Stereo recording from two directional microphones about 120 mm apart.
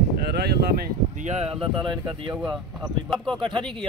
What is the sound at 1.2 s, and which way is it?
Speech, 60° right (ahead or behind).